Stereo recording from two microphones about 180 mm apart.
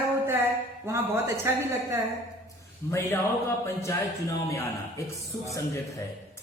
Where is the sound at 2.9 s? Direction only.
15° left (ahead or behind).